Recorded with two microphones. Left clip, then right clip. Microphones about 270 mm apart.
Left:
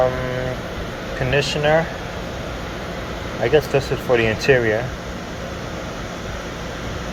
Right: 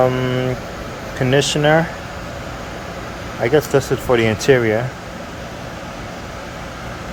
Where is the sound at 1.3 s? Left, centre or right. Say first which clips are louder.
Right 3 dB; right.